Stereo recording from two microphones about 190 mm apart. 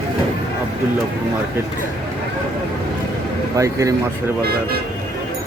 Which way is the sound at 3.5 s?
15° right (ahead or behind).